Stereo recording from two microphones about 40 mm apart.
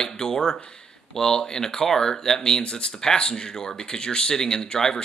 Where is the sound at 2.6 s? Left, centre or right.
Left.